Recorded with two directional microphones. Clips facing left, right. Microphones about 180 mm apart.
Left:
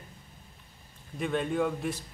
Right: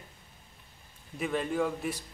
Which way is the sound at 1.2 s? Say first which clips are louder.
Left 1 dB; centre (ahead or behind).